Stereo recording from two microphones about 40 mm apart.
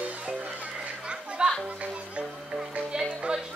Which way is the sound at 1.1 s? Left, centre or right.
Right.